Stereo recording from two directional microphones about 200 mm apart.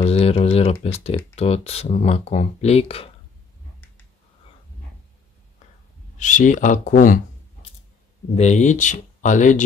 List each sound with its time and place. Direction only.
0.0 s a sound: 30° left (ahead or behind)
0.8 s speech: 30° left (ahead or behind)
6.1 s speech: 40° left (ahead or behind)
8.4 s speech: 35° left (ahead or behind)